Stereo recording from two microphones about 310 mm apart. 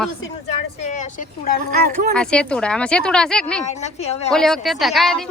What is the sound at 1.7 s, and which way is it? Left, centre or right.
Speech, right.